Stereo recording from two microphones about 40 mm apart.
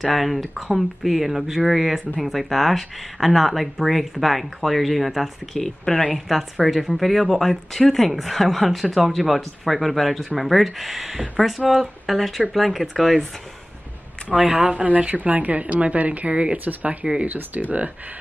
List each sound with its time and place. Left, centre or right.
0.0 s speech: centre
5.9 s speech: left
6.1 s speech: centre
14.3 s speech: right
14.9 s speech: right
16.5 s speech: right